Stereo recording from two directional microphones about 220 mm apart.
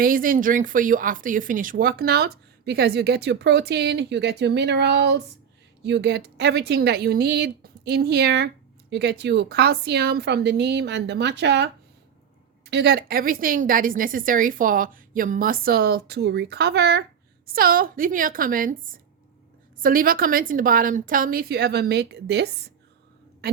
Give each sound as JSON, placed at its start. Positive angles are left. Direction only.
{"t": 0.0, "sound": "speech", "side_deg": -40}
{"t": 12.7, "sound": "a woman's voice", "side_deg": -50}